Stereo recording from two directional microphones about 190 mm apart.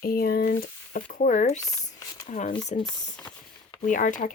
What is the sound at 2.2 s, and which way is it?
Speech, 40° left (ahead or behind).